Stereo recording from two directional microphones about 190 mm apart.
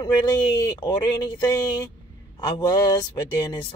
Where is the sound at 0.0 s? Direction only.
20° left (ahead or behind).